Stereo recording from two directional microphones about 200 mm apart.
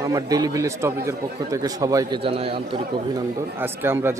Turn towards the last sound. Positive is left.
turn(degrees=-10)  # may be behind; listen again after turning